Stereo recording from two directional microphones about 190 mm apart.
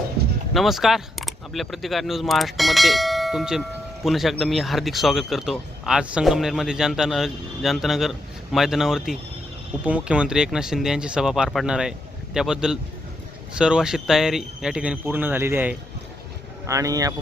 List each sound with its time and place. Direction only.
0.5 s speech: centre (ahead or behind); by 17.2 s 20° right (ahead or behind)